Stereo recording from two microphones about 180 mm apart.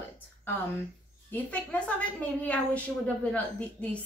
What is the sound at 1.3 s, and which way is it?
A woman's voice, 5° left (ahead or behind).